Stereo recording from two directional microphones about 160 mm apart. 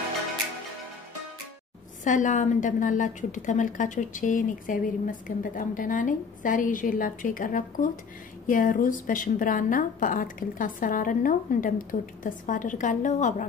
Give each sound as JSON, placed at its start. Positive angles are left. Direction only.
{"t": 2.0, "sound": "a woman's voice", "side_deg": 50}